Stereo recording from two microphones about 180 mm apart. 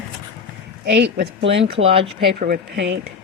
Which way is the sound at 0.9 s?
75° right (ahead or behind).